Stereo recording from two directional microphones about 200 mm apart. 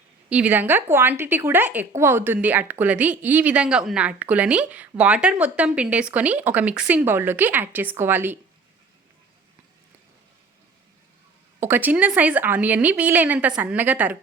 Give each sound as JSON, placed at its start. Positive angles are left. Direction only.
{"t": 0.3, "sound": "speech", "side_deg": -5}
{"t": 11.6, "sound": "speech", "side_deg": -10}